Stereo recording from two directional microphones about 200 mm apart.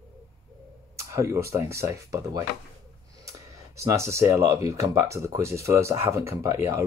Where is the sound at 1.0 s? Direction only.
15° right (ahead or behind).